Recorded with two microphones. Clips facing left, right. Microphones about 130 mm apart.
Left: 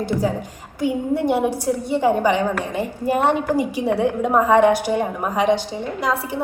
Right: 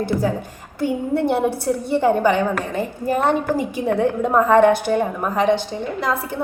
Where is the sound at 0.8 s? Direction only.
15° left (ahead or behind).